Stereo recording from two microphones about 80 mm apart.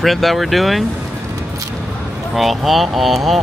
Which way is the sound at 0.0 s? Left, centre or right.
Centre.